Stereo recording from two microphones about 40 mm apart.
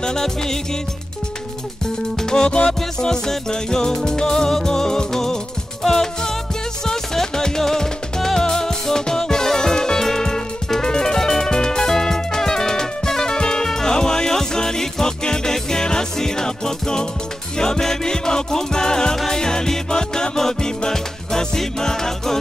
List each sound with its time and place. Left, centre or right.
0.0 s music: centre
2.2 s music: centre